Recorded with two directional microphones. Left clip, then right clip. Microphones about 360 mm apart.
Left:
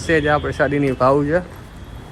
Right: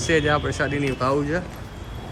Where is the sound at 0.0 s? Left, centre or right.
Centre.